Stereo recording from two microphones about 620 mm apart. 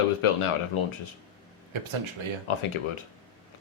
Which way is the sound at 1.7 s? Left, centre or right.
Right.